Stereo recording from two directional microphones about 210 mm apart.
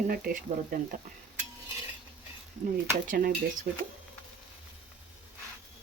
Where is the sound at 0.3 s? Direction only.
45° right (ahead or behind).